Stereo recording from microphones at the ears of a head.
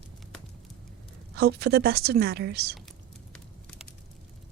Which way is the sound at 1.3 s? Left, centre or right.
Right.